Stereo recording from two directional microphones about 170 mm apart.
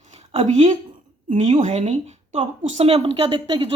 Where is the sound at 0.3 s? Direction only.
40° right (ahead or behind).